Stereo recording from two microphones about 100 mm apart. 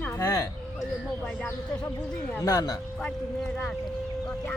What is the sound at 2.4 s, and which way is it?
Speech, 40° left (ahead or behind).